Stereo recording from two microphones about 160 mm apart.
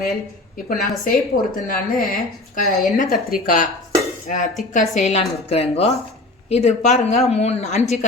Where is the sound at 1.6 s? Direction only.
65° left (ahead or behind).